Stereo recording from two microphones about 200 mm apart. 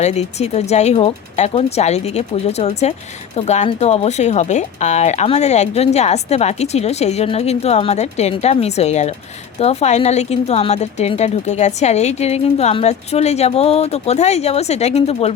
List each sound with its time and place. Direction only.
0.0 s speech: 35° left (ahead or behind)